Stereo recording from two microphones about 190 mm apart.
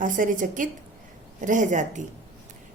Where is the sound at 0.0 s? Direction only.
45° right (ahead or behind).